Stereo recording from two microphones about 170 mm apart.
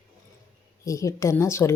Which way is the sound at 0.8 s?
20° left (ahead or behind).